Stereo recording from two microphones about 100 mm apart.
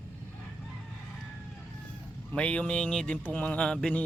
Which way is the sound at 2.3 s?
10° left (ahead or behind).